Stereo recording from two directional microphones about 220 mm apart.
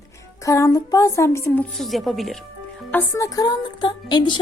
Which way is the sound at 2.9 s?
10° left (ahead or behind).